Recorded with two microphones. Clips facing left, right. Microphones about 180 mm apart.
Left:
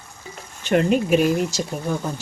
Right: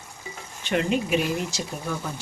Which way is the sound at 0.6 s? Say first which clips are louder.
Left 6 dB; 45° left (ahead or behind).